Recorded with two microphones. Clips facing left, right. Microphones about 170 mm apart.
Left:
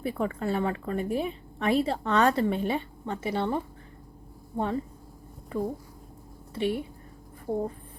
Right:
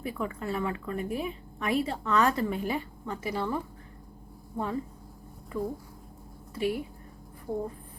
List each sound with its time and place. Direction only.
0.0 s a woman's voice: 30° left (ahead or behind)